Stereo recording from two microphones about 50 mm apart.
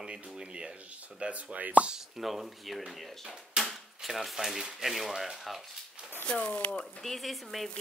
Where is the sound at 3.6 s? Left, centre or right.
Centre.